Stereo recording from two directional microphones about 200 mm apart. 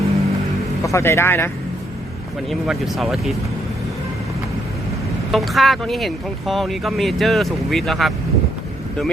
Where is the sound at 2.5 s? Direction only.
Centre (ahead or behind).